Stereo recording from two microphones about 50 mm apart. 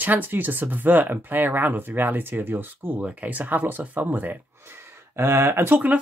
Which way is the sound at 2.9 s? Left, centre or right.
Right.